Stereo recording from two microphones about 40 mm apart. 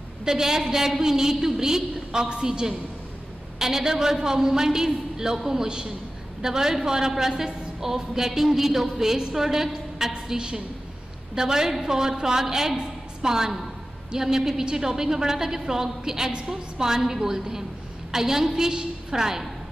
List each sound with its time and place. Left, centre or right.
0.2 s a woman's voice: centre